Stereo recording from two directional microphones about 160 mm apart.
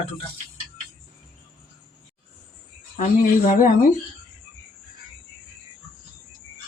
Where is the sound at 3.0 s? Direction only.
55° left (ahead or behind).